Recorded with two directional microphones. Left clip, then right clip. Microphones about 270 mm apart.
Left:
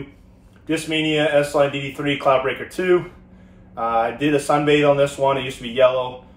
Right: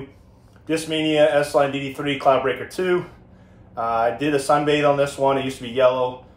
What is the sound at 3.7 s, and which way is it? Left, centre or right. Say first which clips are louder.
Speech: left 1 dB; centre.